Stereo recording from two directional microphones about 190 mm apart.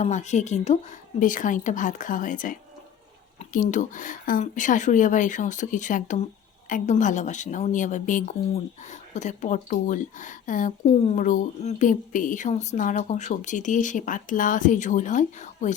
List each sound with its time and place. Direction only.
0.0 s speech: 40° left (ahead or behind)